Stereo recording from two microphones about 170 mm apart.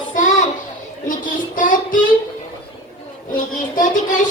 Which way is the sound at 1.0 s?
50° left (ahead or behind).